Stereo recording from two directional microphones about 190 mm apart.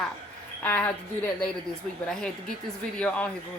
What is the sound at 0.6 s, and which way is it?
Speech, 10° left (ahead or behind).